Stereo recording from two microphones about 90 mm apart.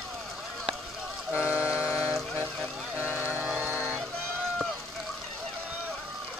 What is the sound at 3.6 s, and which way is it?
Music, 25° right (ahead or behind).